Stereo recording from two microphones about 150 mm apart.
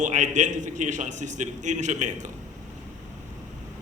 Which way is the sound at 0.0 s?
55° right (ahead or behind).